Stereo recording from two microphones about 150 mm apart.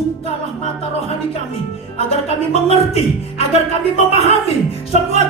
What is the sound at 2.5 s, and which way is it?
Music, 45° left (ahead or behind).